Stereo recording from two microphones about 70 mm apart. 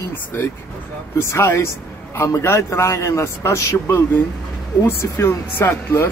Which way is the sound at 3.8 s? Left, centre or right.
Left.